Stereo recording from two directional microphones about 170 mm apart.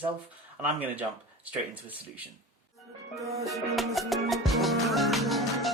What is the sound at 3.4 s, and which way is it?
Music, centre (ahead or behind).